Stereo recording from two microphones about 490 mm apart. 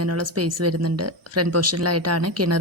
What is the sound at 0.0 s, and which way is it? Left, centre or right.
Speech, right.